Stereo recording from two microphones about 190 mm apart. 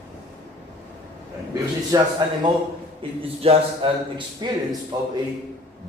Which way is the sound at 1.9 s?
15° right (ahead or behind).